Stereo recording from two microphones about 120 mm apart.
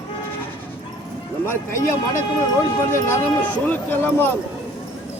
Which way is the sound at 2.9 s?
20° left (ahead or behind).